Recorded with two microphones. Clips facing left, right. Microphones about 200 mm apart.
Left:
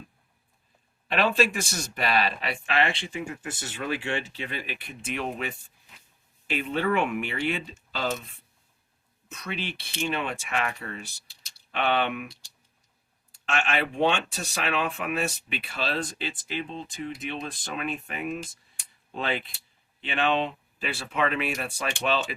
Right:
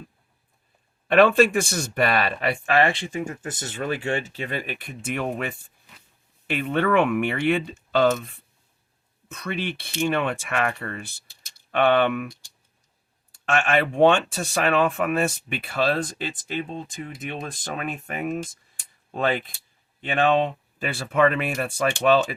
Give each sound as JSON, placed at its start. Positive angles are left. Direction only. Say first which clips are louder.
{"t": 1.0, "sound": "speech", "louder": "right 8 dB", "side_deg": -50}
{"t": 6.5, "sound": "speech", "louder": "right 4 dB", "side_deg": -60}
{"t": 9.3, "sound": "speech", "louder": "right 5 dB", "side_deg": -50}